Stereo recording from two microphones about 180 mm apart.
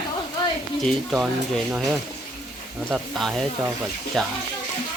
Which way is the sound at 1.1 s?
5° right (ahead or behind).